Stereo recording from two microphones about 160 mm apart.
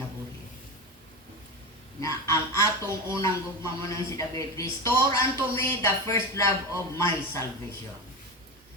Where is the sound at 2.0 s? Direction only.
20° left (ahead or behind).